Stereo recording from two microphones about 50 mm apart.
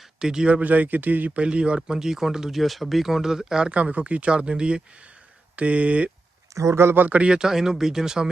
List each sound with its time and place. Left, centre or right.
0.0 s a sound: centre
0.5 s a man's voice: right
1.4 s speech: right
3.7 s speech: right
6.5 s speech: right
6.9 s a man's voice: right
7.2 s speech: centre